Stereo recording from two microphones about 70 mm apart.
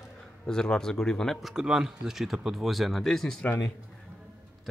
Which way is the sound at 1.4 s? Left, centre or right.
Centre.